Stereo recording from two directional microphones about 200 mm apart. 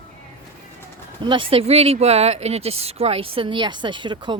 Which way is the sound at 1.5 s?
30° right (ahead or behind).